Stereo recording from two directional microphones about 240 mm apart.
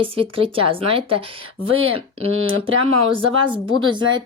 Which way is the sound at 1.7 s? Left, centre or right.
Right.